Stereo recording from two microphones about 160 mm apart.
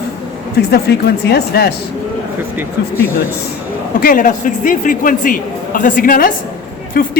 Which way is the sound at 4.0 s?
60° left (ahead or behind).